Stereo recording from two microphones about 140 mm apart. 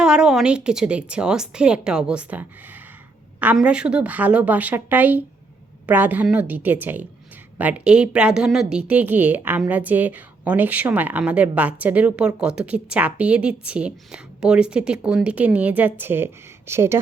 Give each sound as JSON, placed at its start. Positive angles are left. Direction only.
{"t": 0.0, "sound": "a woman's voice", "side_deg": -5}